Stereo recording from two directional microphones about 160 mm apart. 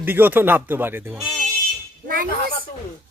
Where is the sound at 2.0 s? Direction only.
60° right (ahead or behind).